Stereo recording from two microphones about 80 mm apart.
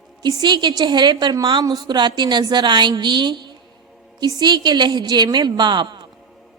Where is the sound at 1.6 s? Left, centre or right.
Right.